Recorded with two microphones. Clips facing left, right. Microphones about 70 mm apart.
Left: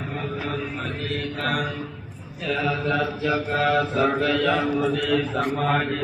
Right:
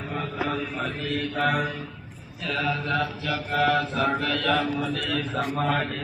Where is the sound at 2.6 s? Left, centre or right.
Centre.